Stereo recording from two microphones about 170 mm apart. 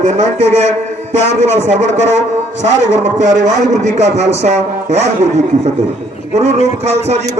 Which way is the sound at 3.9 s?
40° right (ahead or behind).